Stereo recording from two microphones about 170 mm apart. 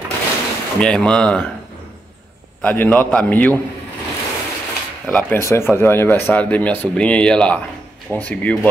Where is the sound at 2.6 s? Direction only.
10° left (ahead or behind).